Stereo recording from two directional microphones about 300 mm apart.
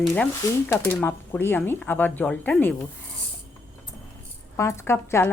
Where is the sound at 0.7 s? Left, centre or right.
Centre.